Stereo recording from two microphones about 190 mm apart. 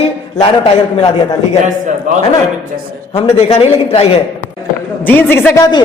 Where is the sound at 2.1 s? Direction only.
40° right (ahead or behind).